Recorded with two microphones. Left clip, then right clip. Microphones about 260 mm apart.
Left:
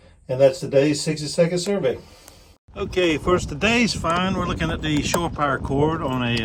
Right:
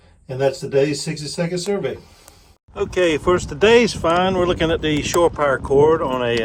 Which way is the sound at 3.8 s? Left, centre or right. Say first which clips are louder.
Right 5 dB; centre.